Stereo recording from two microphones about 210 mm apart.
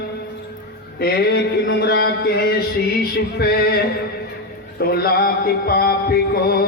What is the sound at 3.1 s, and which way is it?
Music, 50° left (ahead or behind).